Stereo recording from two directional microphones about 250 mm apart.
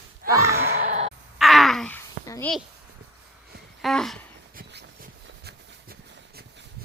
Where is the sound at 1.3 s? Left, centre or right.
Centre.